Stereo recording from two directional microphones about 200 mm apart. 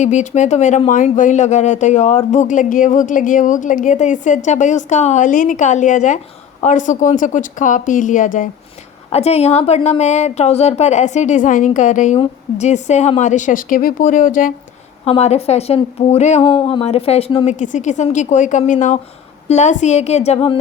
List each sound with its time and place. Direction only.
0.0 s speech: 40° left (ahead or behind)
15.0 s speech: 30° left (ahead or behind)